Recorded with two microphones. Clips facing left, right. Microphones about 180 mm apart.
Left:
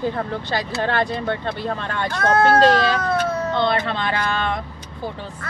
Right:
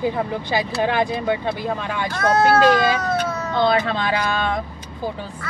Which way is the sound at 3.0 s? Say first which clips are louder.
Left 1 dB; 55° left (ahead or behind).